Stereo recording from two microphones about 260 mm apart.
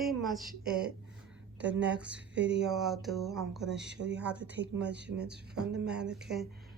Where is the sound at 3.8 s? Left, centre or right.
Right.